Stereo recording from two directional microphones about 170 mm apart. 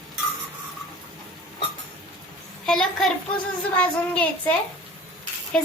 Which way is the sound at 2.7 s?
Centre (ahead or behind).